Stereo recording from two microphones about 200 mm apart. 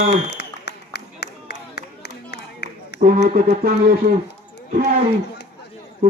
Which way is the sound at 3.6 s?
50° right (ahead or behind).